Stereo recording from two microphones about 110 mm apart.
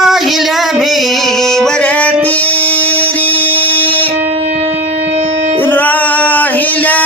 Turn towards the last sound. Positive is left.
turn(degrees=15)  # may be behind; listen again after turning